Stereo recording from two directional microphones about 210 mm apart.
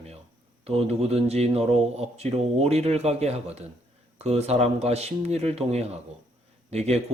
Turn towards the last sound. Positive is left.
turn(degrees=-30)  # may be behind; listen again after turning